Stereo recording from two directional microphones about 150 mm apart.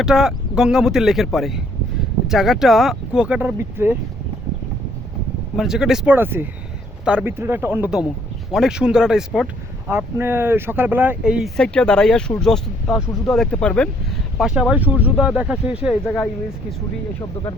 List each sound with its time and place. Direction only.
0.0 s speech: 5° right (ahead or behind)
5.5 s speech: 5° right (ahead or behind)
9.9 s speech: 15° right (ahead or behind); by 13.9 s 5° left (ahead or behind)
14.3 s speech: 5° right (ahead or behind)